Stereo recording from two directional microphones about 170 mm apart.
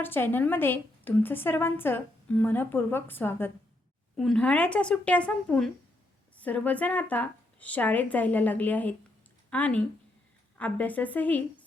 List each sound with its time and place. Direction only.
0.0 s a woman's voice: 10° left (ahead or behind)